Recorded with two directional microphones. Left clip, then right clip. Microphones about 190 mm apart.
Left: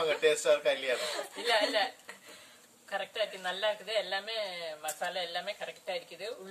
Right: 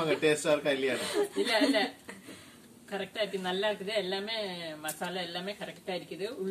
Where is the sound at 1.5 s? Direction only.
25° left (ahead or behind).